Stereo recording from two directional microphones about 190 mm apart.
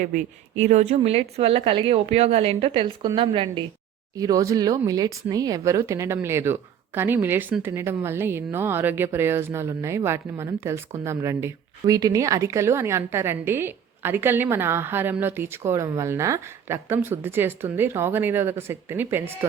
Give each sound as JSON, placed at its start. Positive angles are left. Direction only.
{"t": 0.6, "sound": "speech", "side_deg": -35}
{"t": 4.2, "sound": "speech", "side_deg": -20}